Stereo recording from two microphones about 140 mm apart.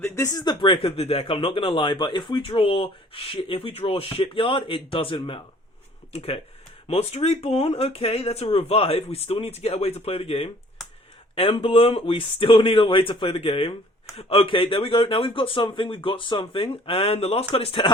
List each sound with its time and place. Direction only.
0.0 s speech: 25° left (ahead or behind)
0.6 s speech: 40° left (ahead or behind)